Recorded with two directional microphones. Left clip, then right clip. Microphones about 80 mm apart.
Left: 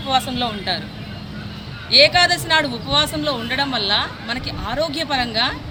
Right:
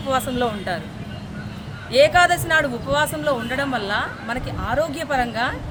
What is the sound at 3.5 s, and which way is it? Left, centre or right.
A man's voice, right.